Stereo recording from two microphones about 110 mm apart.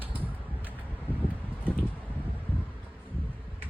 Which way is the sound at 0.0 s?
15° right (ahead or behind).